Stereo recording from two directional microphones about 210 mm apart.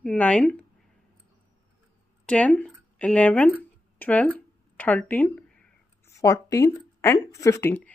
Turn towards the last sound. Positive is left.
turn(degrees=10)  # may be behind; listen again after turning